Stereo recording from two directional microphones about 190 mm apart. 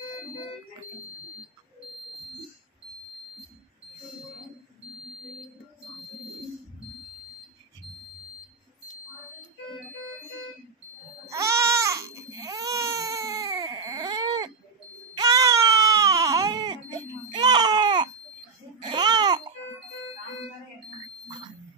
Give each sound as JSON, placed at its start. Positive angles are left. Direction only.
{"t": 11.2, "sound": "baby cry", "side_deg": -15}
{"t": 18.8, "sound": "babbling", "side_deg": -25}